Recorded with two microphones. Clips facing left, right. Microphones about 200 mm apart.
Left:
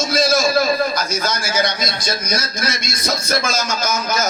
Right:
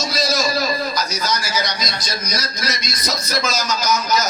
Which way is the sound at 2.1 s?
50° left (ahead or behind).